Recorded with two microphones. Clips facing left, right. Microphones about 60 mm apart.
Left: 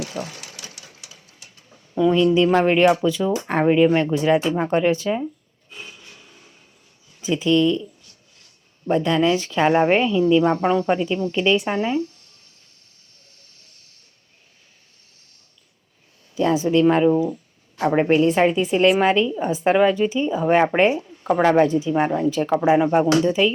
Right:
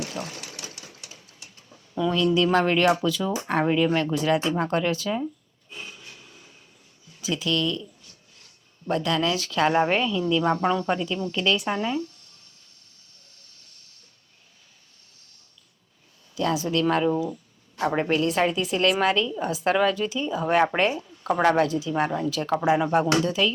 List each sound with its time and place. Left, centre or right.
1.0 s a sound: right
2.0 s a woman's voice: centre
7.2 s a woman's voice: left
8.9 s a woman's voice: left
16.3 s a woman's voice: left